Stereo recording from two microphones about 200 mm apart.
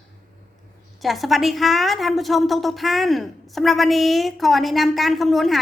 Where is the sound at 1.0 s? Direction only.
Centre (ahead or behind).